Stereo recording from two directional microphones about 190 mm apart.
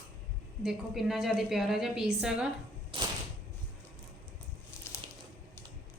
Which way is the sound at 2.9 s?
30° right (ahead or behind).